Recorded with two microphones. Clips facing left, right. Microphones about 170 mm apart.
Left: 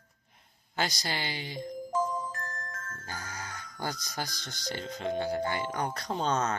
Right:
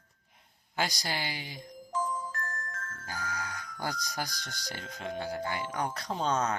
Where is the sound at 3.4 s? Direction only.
10° right (ahead or behind).